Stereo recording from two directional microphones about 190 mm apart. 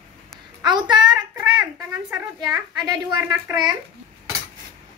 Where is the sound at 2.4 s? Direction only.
20° right (ahead or behind).